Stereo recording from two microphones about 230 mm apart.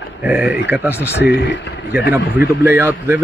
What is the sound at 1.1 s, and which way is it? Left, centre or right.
Speech, left.